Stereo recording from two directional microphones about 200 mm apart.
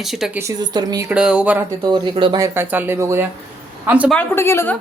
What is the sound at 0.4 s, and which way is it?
Speech, 20° right (ahead or behind).